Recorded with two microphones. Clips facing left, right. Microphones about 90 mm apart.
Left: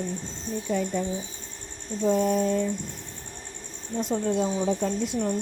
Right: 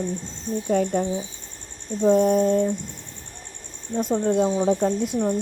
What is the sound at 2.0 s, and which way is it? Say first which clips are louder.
Speech: right 5 dB; 45° right (ahead or behind).